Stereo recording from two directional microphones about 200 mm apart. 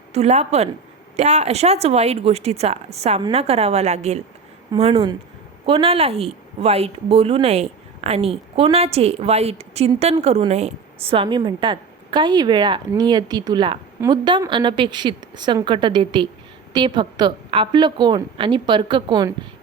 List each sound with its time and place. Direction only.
0.1 s a woman's voice: 30° right (ahead or behind)